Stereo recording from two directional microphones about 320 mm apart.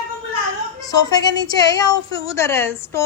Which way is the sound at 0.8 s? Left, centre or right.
Centre.